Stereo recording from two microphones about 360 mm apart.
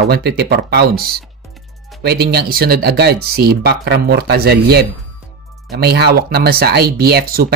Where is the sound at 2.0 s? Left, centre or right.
Right.